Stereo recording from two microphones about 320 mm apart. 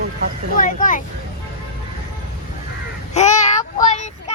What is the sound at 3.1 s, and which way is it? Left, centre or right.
Child singing, left.